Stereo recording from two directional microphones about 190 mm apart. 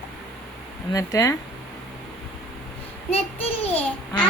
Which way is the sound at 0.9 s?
15° left (ahead or behind).